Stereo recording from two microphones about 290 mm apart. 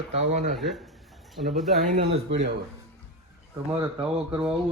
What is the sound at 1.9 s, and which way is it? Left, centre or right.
Speech, right.